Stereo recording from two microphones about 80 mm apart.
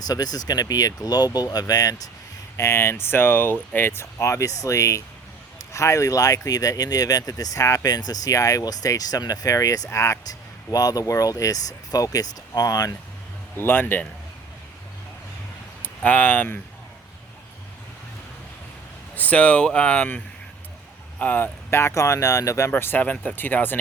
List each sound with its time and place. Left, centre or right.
0.0 s speech: left
2.6 s speech: left
10.2 s speech: left
13.6 s speech: left
15.8 s speech: centre
19.1 s speech: centre; by 22.7 s left
22.7 s speech: left